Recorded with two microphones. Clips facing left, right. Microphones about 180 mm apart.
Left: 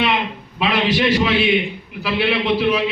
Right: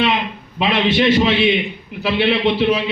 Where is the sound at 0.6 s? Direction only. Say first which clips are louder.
Right 2 dB; 25° right (ahead or behind).